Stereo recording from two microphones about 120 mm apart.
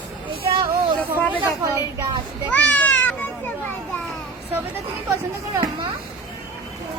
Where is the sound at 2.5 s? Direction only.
15° left (ahead or behind).